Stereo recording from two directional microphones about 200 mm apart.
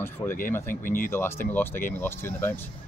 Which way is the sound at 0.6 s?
45° left (ahead or behind).